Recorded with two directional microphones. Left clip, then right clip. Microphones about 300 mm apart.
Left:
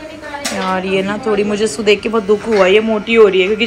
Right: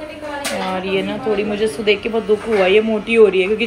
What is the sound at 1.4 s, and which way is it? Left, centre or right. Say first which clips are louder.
Speech: left 3 dB; left.